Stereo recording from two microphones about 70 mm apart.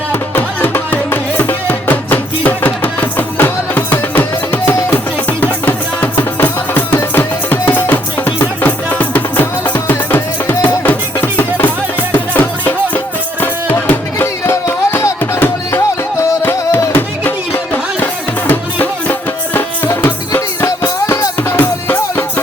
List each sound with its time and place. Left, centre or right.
0.1 s music: left
18.0 s music: left
20.6 s music: left
21.5 s music: left